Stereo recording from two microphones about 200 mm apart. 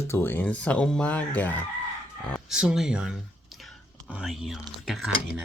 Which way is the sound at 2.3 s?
5° right (ahead or behind).